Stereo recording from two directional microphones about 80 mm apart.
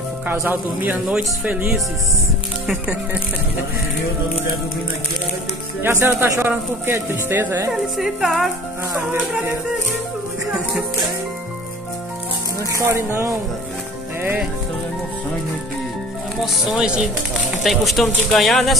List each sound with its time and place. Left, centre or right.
0.3 s a man's voice: right
5.8 s a man's voice: right
8.0 s speech: centre
12.7 s speech: right
16.6 s speech: centre